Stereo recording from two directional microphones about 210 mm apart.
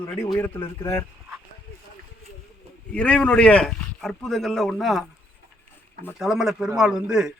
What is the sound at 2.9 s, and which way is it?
A man's voice, 5° left (ahead or behind).